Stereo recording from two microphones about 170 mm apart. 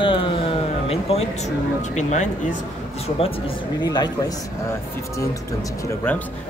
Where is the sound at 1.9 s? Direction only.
45° left (ahead or behind).